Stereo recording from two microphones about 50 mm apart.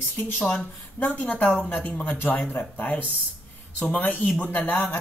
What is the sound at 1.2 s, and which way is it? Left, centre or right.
Speech, left.